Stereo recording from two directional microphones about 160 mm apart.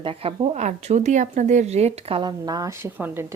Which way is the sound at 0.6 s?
45° right (ahead or behind).